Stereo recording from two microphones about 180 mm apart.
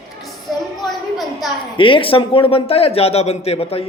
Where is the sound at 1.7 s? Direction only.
30° left (ahead or behind).